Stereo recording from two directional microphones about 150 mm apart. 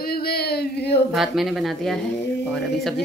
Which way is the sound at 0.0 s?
90° left.